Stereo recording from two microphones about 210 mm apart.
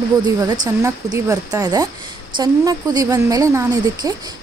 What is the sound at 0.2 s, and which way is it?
A woman's voice, 15° right (ahead or behind).